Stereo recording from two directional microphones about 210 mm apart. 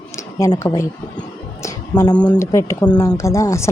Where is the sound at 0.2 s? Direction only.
15° left (ahead or behind).